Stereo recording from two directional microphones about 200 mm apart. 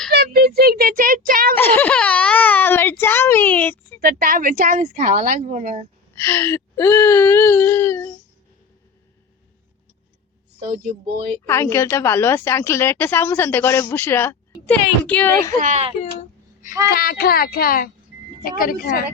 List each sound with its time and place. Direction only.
0.1 s a sound: 55° right (ahead or behind)
1.5 s a sound: 10° left (ahead or behind)
4.0 s speech: 45° right (ahead or behind)
6.1 s a woman's voice: 10° left (ahead or behind)
10.9 s speech: 20° right (ahead or behind)
11.4 s a woman's voice: 10° left (ahead or behind)
15.5 s speech: 35° right (ahead or behind)
16.6 s speech: 15° right (ahead or behind)
16.9 s a child's voice: 50° left (ahead or behind)